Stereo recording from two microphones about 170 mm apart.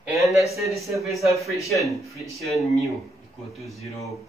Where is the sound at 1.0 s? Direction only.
Centre (ahead or behind).